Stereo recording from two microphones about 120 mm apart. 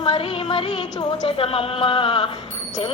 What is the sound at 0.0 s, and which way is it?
Jingle bell, 45° left (ahead or behind).